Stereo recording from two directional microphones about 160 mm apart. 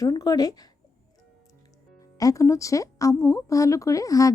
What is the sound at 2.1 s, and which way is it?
Speech, 20° left (ahead or behind).